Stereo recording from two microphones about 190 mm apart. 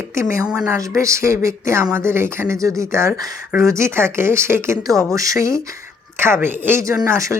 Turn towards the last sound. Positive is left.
turn(degrees=-15)  # may be behind; listen again after turning